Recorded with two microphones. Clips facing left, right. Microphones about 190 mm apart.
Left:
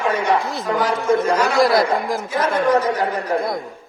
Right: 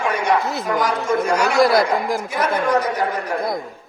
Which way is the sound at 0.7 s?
25° left (ahead or behind).